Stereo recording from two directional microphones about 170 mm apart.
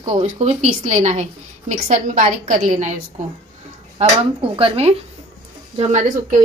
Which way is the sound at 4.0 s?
40° right (ahead or behind).